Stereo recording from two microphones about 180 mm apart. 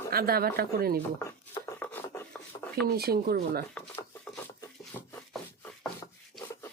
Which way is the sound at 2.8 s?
60° right (ahead or behind).